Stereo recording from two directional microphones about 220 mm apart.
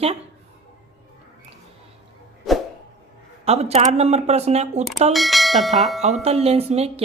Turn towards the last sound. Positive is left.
turn(degrees=-30)  # may be behind; listen again after turning